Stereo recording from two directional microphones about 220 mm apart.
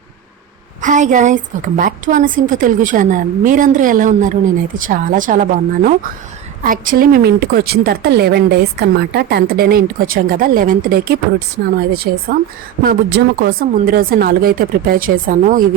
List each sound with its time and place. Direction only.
0.8 s a woman's voice: 35° right (ahead or behind)